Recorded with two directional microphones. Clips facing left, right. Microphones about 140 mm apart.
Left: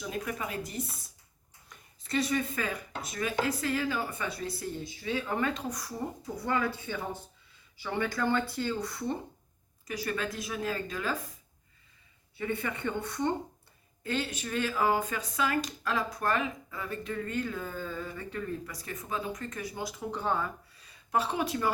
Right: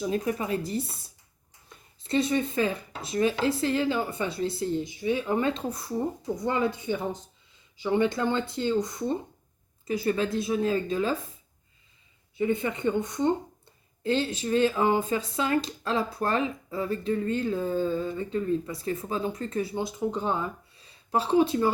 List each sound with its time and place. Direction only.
0.0 s speech: 35° right (ahead or behind)
2.0 s speech: 25° right (ahead or behind)
12.4 s speech: 20° right (ahead or behind)